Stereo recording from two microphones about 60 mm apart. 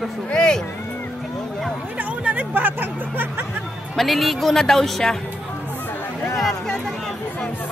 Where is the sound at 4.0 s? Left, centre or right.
Centre.